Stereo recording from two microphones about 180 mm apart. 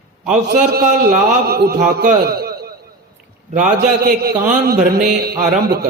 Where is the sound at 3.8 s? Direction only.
55° right (ahead or behind).